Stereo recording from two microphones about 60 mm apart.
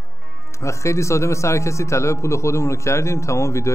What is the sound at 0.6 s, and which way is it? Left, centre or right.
Speech, left.